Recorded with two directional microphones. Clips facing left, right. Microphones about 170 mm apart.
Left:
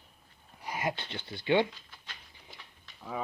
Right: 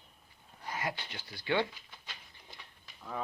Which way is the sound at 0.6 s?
15° left (ahead or behind).